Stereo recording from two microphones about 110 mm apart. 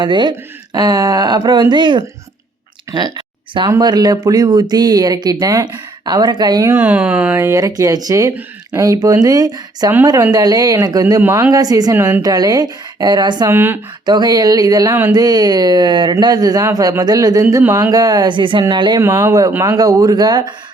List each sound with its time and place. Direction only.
0.0 s speech: 45° right (ahead or behind)
2.9 s a sound: 45° right (ahead or behind)
3.7 s speech: 40° right (ahead or behind)
6.7 s speech: 15° right (ahead or behind)
7.3 s speech: 25° right (ahead or behind)
11.5 s speech: 35° right (ahead or behind)
11.9 s speech: 20° right (ahead or behind)
12.2 s speech: 35° right (ahead or behind)
13.5 s speech: 20° right (ahead or behind)
14.0 s speech: 40° right (ahead or behind)
18.9 s speech: 25° right (ahead or behind)